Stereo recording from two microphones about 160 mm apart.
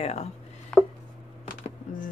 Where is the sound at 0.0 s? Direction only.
45° left (ahead or behind).